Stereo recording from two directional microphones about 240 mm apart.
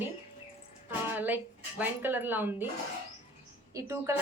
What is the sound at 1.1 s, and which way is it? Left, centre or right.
A woman's voice, centre.